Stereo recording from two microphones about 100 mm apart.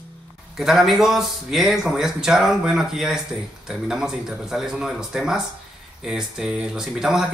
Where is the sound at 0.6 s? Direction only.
5° right (ahead or behind).